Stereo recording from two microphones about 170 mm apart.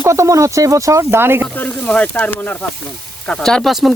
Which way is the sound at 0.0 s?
15° right (ahead or behind).